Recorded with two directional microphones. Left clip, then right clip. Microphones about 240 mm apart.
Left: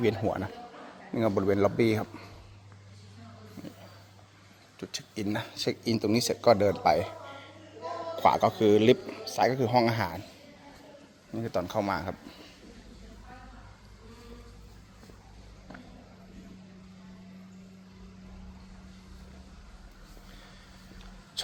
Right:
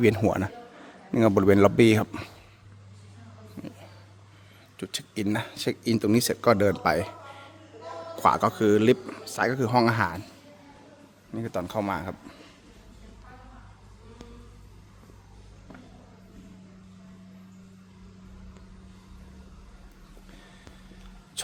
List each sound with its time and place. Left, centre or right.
0.1 s speech: right
4.8 s a man's voice: right
11.3 s speech: centre